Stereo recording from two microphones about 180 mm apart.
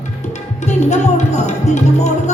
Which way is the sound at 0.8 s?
40° left (ahead or behind).